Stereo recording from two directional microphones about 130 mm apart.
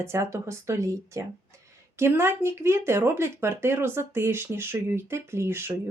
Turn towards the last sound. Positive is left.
turn(degrees=-20)  # may be behind; listen again after turning